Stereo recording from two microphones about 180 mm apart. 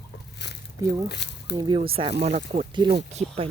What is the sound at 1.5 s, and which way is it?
Speech, 25° right (ahead or behind).